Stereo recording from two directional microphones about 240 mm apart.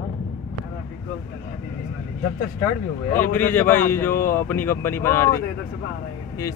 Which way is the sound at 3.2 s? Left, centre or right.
Centre.